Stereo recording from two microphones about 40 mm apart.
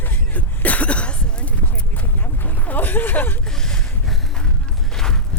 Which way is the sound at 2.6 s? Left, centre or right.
Left.